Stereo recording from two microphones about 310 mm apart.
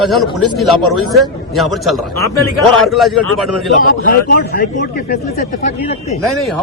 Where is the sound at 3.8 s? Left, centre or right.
Left.